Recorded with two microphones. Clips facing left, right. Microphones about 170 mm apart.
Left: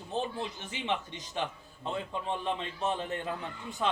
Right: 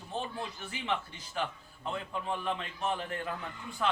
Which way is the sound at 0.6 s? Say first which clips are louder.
Even; 20° left (ahead or behind).